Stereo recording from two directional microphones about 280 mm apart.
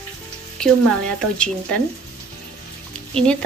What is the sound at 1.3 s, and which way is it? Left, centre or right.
Speech, centre.